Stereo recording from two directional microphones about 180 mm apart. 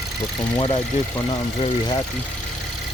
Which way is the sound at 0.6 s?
30° left (ahead or behind).